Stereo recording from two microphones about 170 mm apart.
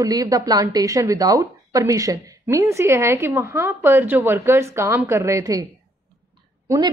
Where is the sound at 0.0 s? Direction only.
20° right (ahead or behind).